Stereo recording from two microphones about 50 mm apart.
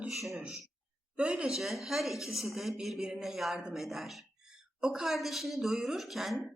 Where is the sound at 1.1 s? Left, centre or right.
Right.